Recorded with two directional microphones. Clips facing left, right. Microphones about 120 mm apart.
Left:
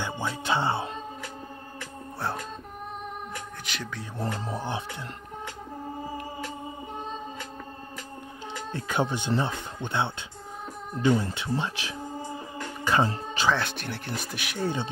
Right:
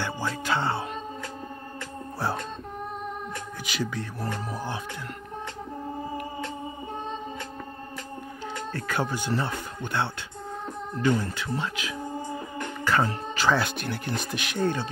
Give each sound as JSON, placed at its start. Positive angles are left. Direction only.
{"t": 0.0, "sound": "music", "side_deg": 20}
{"t": 2.1, "sound": "music", "side_deg": 0}
{"t": 3.6, "sound": "speech", "side_deg": -5}
{"t": 4.2, "sound": "speech", "side_deg": 25}
{"t": 8.7, "sound": "speech", "side_deg": 20}
{"t": 12.8, "sound": "speech", "side_deg": 20}
{"t": 13.5, "sound": "speech", "side_deg": 0}